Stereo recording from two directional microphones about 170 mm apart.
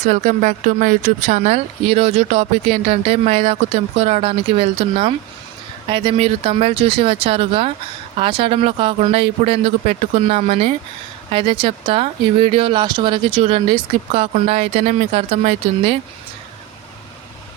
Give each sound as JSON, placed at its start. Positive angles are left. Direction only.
{"t": 0.0, "sound": "speech", "side_deg": -45}